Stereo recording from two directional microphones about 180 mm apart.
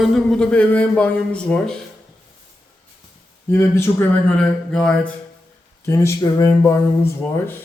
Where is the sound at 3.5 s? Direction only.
15° left (ahead or behind).